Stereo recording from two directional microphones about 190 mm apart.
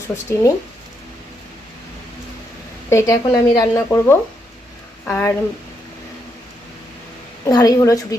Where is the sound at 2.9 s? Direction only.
15° left (ahead or behind).